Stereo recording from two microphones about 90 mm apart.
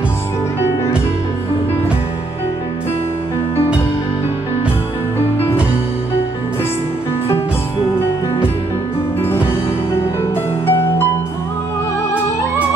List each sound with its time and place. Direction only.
9.2 s music: 25° left (ahead or behind)